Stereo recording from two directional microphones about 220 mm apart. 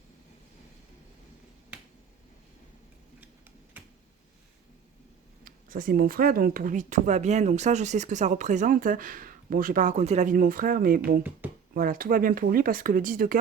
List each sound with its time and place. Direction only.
5.5 s speech: 40° right (ahead or behind)